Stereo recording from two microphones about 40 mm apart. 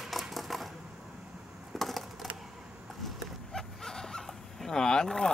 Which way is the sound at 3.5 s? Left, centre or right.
Centre.